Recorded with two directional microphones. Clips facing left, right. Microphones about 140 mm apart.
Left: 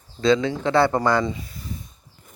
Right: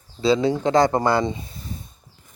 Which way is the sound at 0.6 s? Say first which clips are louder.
Right 1 dB; 40° right (ahead or behind).